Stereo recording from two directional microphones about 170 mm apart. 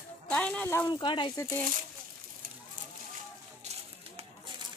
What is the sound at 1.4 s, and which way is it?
Speech, 15° left (ahead or behind).